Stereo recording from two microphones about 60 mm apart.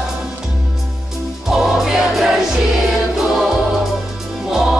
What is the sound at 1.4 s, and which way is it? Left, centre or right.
Music, centre.